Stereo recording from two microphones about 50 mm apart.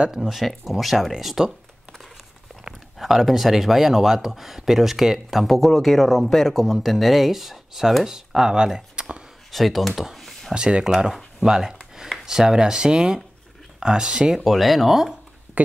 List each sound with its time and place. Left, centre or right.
0.0 s speech: centre
3.0 s speech: centre
9.5 s speech: centre
10.5 s speech: centre
14.4 s speech: centre
15.6 s speech: right